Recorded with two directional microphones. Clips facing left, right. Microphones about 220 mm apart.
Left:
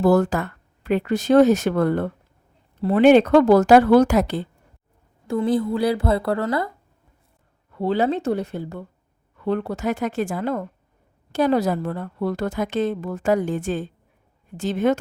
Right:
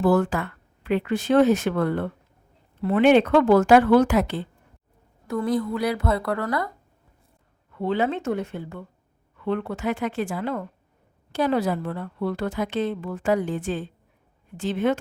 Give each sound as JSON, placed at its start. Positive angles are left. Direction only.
{"t": 0.0, "sound": "speech", "side_deg": 40}
{"t": 5.3, "sound": "a woman's voice", "side_deg": 30}
{"t": 7.8, "sound": "a woman's voice", "side_deg": 35}